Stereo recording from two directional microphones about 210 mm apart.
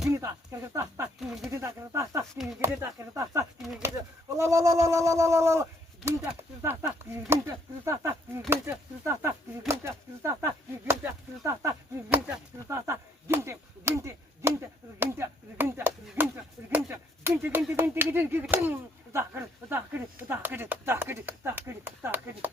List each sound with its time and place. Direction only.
0.1 s speech: 15° right (ahead or behind)
1.2 s speech: centre (ahead or behind)
1.5 s speech: 15° right (ahead or behind)
3.6 s speech: centre (ahead or behind)
4.4 s speech: 15° right (ahead or behind)